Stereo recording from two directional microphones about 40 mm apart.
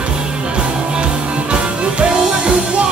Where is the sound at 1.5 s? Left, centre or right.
Right.